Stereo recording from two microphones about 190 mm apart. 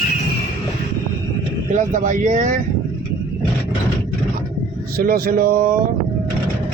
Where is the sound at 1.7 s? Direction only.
45° right (ahead or behind).